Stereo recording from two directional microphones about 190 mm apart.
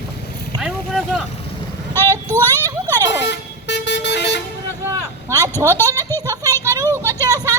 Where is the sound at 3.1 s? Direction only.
65° left (ahead or behind).